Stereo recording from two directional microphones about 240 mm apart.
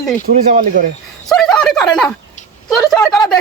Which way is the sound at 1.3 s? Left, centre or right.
Centre.